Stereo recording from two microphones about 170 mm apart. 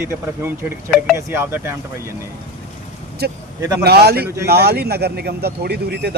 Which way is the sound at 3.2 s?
70° right (ahead or behind).